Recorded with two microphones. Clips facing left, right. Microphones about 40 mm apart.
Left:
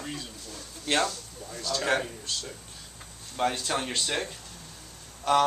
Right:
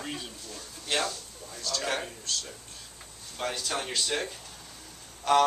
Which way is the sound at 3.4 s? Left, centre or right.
Centre.